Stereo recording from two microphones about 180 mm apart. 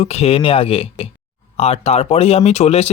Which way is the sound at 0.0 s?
35° left (ahead or behind).